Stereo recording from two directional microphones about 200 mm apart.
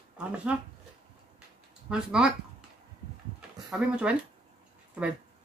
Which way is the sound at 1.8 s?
5° right (ahead or behind).